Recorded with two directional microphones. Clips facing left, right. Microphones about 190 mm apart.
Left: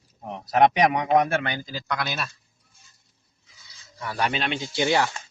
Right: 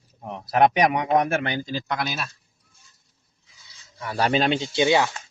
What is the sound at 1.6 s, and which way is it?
Speech, 25° right (ahead or behind).